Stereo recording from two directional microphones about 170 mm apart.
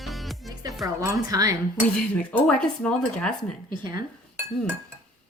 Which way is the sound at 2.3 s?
5° left (ahead or behind).